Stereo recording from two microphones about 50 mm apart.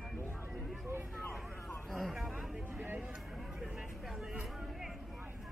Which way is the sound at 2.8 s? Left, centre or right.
Right.